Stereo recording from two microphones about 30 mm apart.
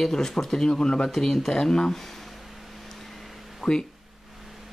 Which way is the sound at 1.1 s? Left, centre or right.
Centre.